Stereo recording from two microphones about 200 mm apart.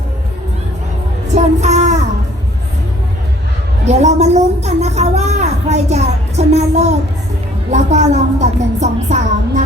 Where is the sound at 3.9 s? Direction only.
35° right (ahead or behind).